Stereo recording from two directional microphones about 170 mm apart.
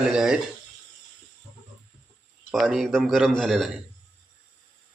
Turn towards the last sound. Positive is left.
turn(degrees=0)  # may be behind; listen again after turning